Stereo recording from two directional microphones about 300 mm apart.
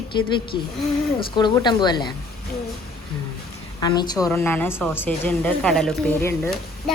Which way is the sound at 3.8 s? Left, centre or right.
Centre.